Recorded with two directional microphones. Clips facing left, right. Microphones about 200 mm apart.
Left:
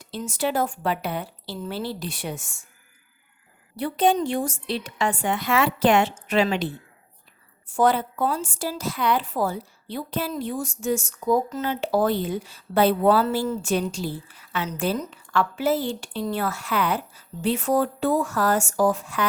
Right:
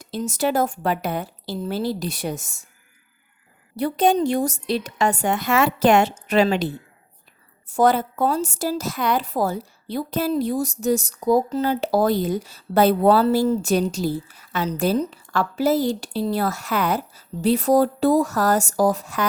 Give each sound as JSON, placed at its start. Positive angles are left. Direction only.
{"t": 0.0, "sound": "a woman's voice", "side_deg": -40}
{"t": 3.8, "sound": "a woman's voice", "side_deg": -40}